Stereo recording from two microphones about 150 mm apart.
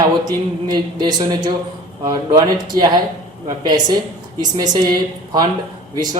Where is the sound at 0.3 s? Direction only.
30° right (ahead or behind).